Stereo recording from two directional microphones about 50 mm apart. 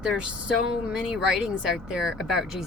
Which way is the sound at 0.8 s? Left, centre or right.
Centre.